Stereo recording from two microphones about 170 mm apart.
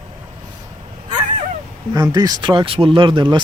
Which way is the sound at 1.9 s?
25° right (ahead or behind).